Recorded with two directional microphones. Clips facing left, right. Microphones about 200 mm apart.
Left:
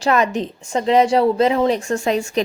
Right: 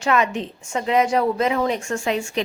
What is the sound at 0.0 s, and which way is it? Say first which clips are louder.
A woman's voice: left 3 dB; 35° left (ahead or behind).